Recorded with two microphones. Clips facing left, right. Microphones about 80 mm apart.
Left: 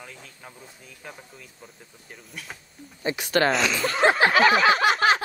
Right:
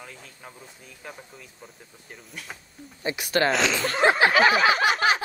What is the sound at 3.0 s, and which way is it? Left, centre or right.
Speech, left.